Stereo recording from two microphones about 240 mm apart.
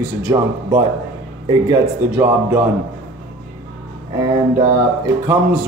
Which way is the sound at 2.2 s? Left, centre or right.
Centre.